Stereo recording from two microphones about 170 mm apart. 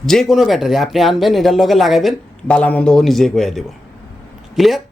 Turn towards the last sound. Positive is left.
turn(degrees=0)  # may be behind; listen again after turning